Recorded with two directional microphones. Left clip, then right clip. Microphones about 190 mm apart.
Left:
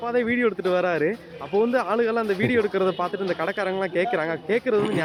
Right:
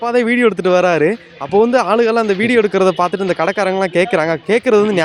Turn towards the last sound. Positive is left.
turn(degrees=-65)  # may be behind; listen again after turning